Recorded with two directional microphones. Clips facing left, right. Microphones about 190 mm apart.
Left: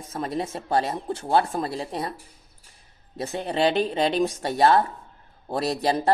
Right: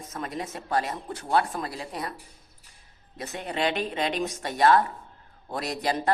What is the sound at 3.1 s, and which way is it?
A woman's voice, 30° left (ahead or behind).